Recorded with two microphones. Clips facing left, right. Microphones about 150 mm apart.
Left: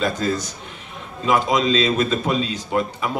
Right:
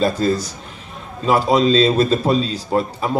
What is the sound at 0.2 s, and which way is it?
A man's voice, 35° right (ahead or behind).